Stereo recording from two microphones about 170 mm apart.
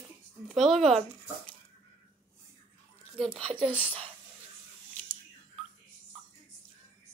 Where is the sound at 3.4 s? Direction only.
35° right (ahead or behind).